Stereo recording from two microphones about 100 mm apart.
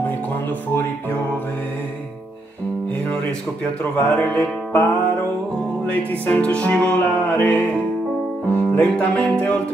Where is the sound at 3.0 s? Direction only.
10° left (ahead or behind).